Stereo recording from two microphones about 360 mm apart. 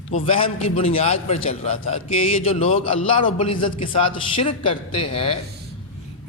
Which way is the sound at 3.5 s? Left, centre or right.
Left.